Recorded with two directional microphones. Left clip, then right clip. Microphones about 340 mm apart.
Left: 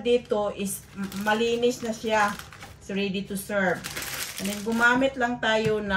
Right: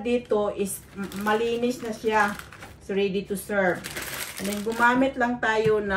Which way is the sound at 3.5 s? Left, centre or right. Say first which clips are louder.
Right 1 dB; centre.